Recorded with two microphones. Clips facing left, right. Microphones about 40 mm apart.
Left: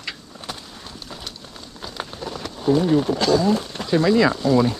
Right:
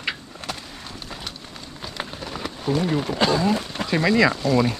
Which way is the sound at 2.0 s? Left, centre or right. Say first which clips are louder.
Even; centre.